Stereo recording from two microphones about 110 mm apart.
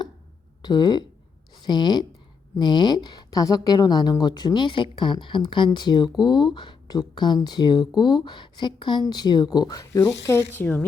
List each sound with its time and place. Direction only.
0.6 s speech: 40° left (ahead or behind)
10.1 s speech: 20° left (ahead or behind)